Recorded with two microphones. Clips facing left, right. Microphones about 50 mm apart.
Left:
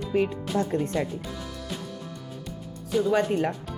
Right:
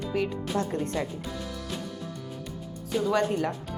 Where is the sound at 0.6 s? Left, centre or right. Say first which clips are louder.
Left 4 dB; centre.